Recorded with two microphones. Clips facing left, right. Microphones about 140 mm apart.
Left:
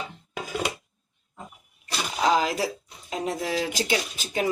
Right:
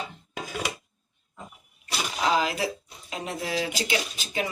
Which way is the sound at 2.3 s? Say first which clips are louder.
Left 1 dB; 40° left (ahead or behind).